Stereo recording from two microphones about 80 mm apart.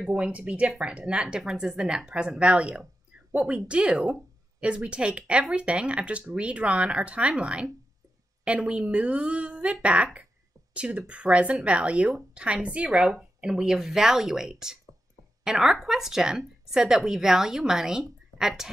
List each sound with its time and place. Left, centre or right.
0.1 s a woman's voice: centre